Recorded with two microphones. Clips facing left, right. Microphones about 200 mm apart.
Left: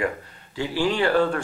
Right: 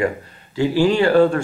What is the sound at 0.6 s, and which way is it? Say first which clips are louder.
Speech: right 7 dB; 40° right (ahead or behind).